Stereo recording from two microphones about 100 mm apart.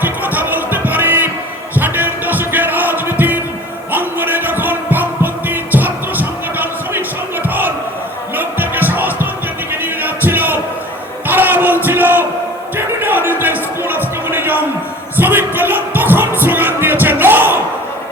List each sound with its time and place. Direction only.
0.0 s music: 20° right (ahead or behind)
8.4 s music: 20° right (ahead or behind)
9.8 s a sound: 20° right (ahead or behind)
15.1 s music: 20° right (ahead or behind)